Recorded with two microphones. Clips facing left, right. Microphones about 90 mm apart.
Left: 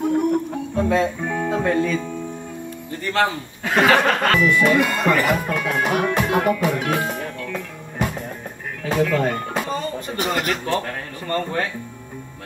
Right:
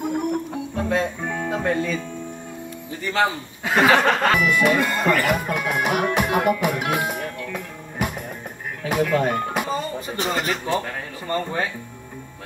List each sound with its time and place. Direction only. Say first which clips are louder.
0.0 s music: left 5 dB; 5° right (ahead or behind)
1.5 s music: left 2 dB; 15° right (ahead or behind)
2.9 s speech: left 1 dB; centre (ahead or behind)
4.9 s speech: left 1 dB; 20° left (ahead or behind)
5.3 s speech: left 1 dB; 15° right (ahead or behind)
6.1 s music: left 1 dB; 10° right (ahead or behind)
8.8 s speech: left 1 dB; 10° right (ahead or behind)
9.7 s music: even; 5° right (ahead or behind)
10.1 s speech: left 1 dB; centre (ahead or behind)